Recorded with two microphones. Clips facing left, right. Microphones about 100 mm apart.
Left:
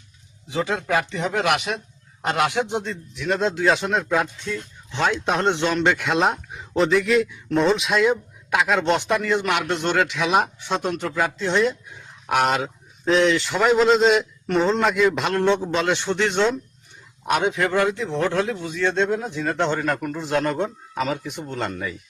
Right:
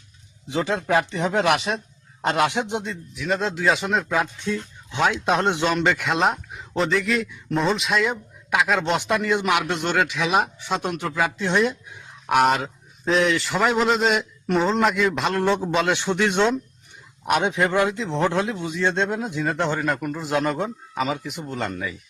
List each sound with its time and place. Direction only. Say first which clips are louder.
0.5 s speech: right 1 dB; 25° right (ahead or behind)
2.9 s speech: left 1 dB; centre (ahead or behind)
4.4 s speech: right 3 dB; 15° right (ahead or behind); by 9.0 s centre (ahead or behind)
9.2 s a man's voice: right 1 dB; 15° right (ahead or behind)
12.3 s a man's voice: right 2 dB; centre (ahead or behind)